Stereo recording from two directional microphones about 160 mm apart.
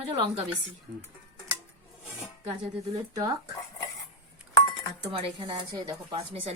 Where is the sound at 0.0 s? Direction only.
40° right (ahead or behind).